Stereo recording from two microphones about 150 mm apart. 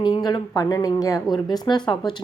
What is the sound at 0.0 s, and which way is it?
A woman's voice, 30° left (ahead or behind).